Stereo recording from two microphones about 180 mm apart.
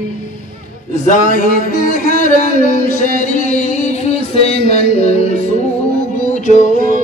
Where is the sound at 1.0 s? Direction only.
45° left (ahead or behind).